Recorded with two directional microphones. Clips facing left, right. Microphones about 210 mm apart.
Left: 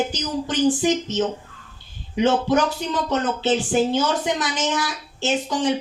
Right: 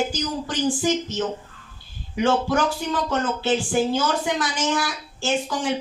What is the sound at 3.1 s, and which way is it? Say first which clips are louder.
A woman's voice: left 3 dB; 20° left (ahead or behind).